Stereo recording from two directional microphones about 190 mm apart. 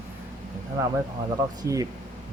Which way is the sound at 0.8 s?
15° right (ahead or behind).